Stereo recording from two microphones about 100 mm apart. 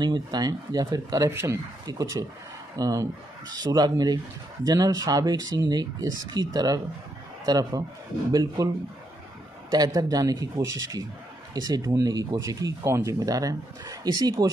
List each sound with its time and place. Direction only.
0.0 s speech: 45° right (ahead or behind)
1.3 s speech: 25° right (ahead or behind)
1.9 s speech: 35° right (ahead or behind)
9.7 s speech: 40° right (ahead or behind)